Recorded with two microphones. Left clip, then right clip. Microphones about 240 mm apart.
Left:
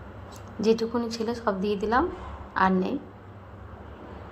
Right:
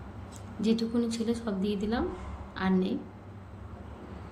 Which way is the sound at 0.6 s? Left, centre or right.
Left.